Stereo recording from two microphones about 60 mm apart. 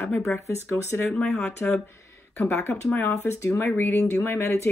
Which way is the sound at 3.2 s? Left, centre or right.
Left.